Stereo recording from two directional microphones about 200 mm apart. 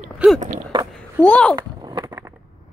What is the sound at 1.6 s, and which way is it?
Skateboard, 20° right (ahead or behind).